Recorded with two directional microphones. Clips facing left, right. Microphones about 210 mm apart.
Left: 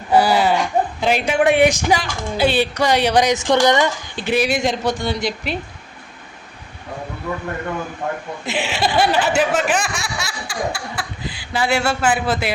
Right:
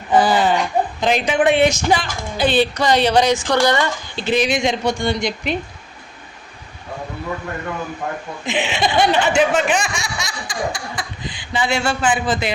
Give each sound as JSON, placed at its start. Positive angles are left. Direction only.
{"t": 0.1, "sound": "a woman's voice", "side_deg": 10}
{"t": 8.4, "sound": "speech", "side_deg": 5}